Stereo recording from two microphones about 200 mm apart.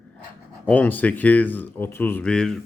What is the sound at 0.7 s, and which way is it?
Speech, 10° left (ahead or behind).